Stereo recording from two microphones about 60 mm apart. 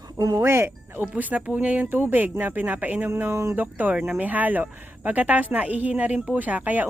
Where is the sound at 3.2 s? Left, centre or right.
Right.